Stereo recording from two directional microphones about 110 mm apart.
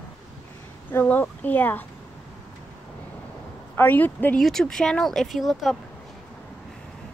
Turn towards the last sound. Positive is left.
turn(degrees=0)  # may be behind; listen again after turning